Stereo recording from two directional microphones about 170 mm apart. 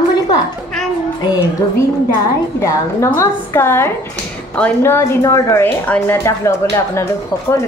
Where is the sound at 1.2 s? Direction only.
20° left (ahead or behind).